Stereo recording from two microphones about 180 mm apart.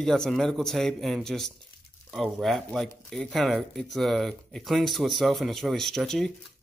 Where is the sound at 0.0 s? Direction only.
5° left (ahead or behind).